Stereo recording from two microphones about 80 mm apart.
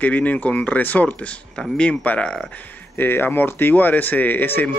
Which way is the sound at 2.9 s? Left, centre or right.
Left.